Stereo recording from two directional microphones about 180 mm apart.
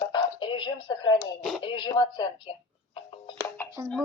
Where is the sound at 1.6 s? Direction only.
25° left (ahead or behind).